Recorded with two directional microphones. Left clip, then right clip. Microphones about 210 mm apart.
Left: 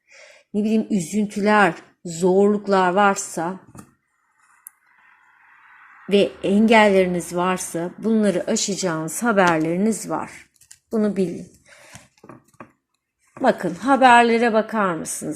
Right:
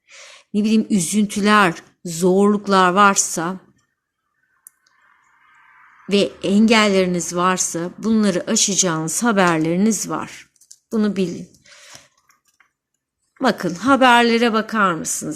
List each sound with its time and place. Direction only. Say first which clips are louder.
0.1 s a woman's voice: right 2 dB; 50° right (ahead or behind)
6.1 s a woman's voice: even; 35° right (ahead or behind)
13.4 s a woman's voice: even; 45° right (ahead or behind)